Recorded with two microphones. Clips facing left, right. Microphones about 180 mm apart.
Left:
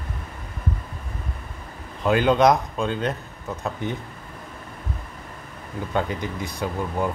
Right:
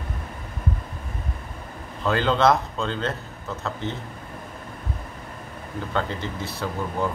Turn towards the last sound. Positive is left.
turn(degrees=15)  # may be behind; listen again after turning